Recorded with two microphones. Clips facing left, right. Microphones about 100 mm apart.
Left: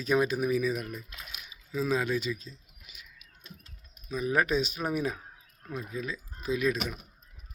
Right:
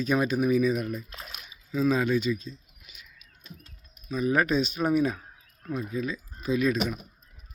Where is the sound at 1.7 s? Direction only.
5° left (ahead or behind).